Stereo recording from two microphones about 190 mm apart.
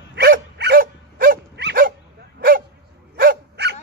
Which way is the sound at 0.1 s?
60° right (ahead or behind).